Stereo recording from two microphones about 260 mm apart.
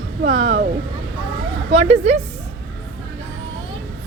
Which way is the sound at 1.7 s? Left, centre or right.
Right.